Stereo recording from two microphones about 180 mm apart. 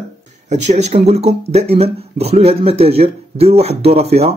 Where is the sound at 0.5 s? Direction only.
40° right (ahead or behind).